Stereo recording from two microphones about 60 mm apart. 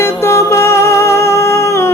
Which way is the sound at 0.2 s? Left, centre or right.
Left.